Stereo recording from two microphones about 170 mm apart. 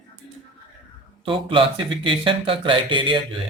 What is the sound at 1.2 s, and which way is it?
Speech, 30° right (ahead or behind).